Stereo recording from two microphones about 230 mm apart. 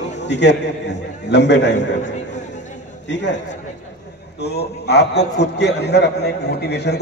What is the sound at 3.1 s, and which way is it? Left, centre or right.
A man's voice, left.